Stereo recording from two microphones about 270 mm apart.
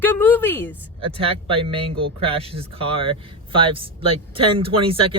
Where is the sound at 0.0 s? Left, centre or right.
Centre.